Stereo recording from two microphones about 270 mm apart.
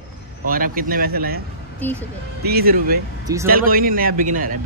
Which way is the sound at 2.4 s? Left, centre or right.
Right.